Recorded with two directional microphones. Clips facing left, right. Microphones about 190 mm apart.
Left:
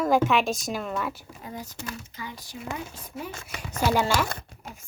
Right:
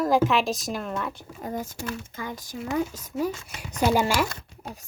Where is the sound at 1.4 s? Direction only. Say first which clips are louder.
Right 6 dB; 50° right (ahead or behind).